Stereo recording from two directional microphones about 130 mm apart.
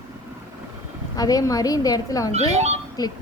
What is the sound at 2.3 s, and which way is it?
Speech, 60° right (ahead or behind).